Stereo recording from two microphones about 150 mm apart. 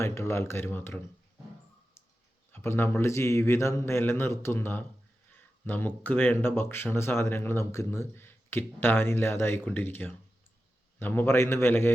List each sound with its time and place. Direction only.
0.0 s speech: 20° left (ahead or behind)
2.5 s speech: 15° left (ahead or behind)
5.4 s a sound: 15° left (ahead or behind)
6.0 s speech: 10° left (ahead or behind)